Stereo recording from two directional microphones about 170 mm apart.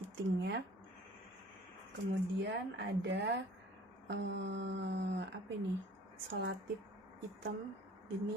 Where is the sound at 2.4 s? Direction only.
80° right.